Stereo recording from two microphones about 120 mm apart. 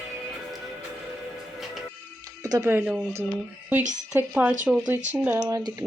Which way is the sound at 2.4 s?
30° right (ahead or behind).